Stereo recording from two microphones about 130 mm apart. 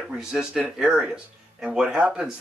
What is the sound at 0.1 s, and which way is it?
Speech, 5° right (ahead or behind).